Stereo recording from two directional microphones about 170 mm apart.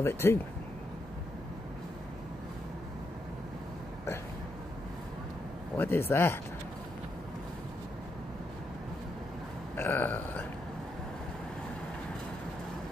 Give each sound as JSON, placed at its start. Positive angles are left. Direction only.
{"t": 0.0, "sound": "speech", "side_deg": 15}
{"t": 5.8, "sound": "speech", "side_deg": 15}
{"t": 9.8, "sound": "speech", "side_deg": 10}